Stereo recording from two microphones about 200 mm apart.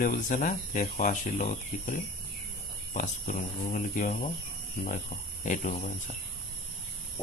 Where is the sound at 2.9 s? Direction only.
40° left (ahead or behind).